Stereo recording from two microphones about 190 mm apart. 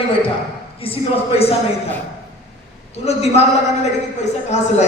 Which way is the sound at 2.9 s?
35° left (ahead or behind).